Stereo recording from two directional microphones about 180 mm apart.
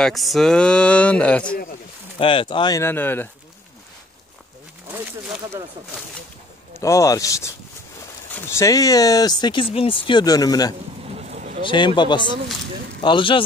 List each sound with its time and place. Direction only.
0.0 s speech: centre (ahead or behind)
2.1 s speech: 30° left (ahead or behind)
2.8 s speech: 10° left (ahead or behind)
4.9 s speech: 5° right (ahead or behind)
6.7 s speech: 15° left (ahead or behind)
11.1 s vehicle: 40° right (ahead or behind)
11.6 s speech: 25° left (ahead or behind)